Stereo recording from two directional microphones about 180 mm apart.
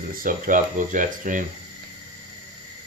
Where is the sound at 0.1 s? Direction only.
50° right (ahead or behind).